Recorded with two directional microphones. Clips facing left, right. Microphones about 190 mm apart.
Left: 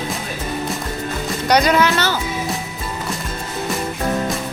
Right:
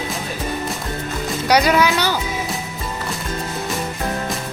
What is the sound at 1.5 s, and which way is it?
Speech, 10° right (ahead or behind).